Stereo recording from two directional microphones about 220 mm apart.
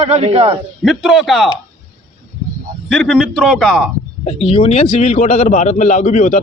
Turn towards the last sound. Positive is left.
turn(degrees=35)  # may be behind; listen again after turning